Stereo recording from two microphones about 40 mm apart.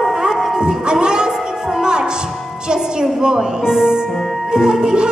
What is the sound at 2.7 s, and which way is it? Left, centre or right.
A woman's voice, centre.